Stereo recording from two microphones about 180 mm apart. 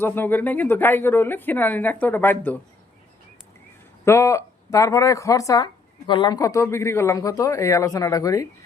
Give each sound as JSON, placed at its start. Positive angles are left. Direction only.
{"t": 0.0, "sound": "speech", "side_deg": 10}
{"t": 4.0, "sound": "speech", "side_deg": 15}